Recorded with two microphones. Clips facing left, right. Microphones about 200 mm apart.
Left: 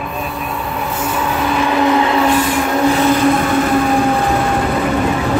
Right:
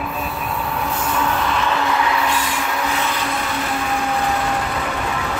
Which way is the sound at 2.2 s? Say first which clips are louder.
Left 8 dB; 50° left (ahead or behind).